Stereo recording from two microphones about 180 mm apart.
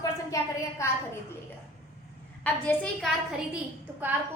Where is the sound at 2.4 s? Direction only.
5° left (ahead or behind).